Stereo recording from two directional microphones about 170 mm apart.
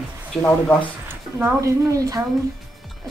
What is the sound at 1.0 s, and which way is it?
Speech, 15° right (ahead or behind).